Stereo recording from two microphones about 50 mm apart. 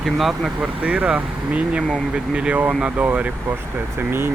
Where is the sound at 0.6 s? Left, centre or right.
Right.